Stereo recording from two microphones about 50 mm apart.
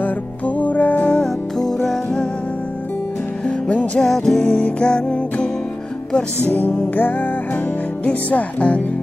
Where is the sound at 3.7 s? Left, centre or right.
Left.